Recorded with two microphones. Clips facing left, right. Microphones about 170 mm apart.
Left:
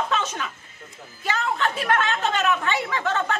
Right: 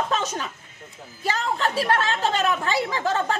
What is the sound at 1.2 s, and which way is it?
A woman's voice, 35° right (ahead or behind).